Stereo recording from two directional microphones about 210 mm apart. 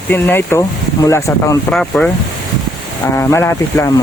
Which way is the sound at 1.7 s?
5° left (ahead or behind).